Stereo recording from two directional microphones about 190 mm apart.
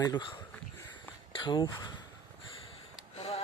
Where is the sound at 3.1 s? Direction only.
30° left (ahead or behind).